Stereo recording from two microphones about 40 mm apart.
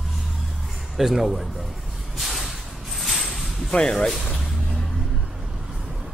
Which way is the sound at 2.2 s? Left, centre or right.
Centre.